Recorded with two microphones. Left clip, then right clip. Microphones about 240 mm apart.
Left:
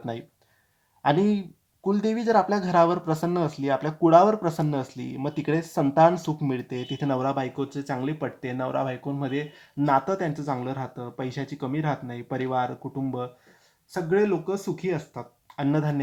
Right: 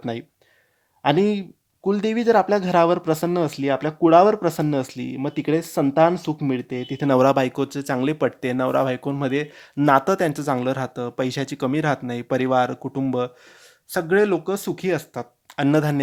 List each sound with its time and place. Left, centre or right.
0.0 s speech: right